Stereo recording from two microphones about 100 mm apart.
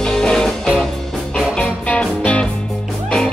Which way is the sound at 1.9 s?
10° left (ahead or behind).